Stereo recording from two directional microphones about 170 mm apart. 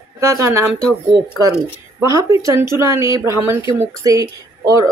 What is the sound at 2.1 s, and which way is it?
Speech, 20° right (ahead or behind).